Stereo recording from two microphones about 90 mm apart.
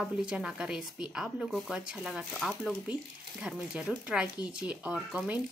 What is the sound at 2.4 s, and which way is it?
Speech, 5° left (ahead or behind).